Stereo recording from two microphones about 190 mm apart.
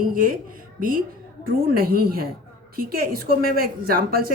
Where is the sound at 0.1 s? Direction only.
50° right (ahead or behind).